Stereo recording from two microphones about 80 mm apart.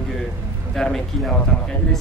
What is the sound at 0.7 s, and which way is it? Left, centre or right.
Speech, centre.